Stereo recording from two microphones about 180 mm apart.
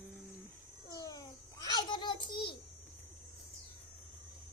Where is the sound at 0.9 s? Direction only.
20° left (ahead or behind).